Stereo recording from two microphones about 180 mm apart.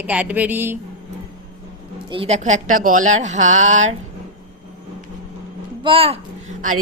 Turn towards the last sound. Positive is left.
turn(degrees=-35)  # may be behind; listen again after turning